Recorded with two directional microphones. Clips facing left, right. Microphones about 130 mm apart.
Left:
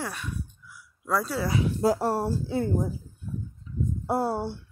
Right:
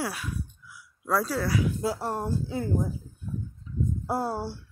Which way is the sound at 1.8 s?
40° left (ahead or behind).